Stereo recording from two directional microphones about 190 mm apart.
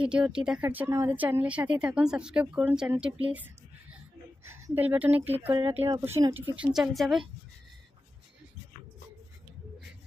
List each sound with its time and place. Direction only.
0.0 s speech: 5° right (ahead or behind)
3.3 s a sound: 10° right (ahead or behind)
4.4 s speech: 15° right (ahead or behind)
5.7 s speech: 30° right (ahead or behind)
6.0 s a woman's voice: 15° right (ahead or behind)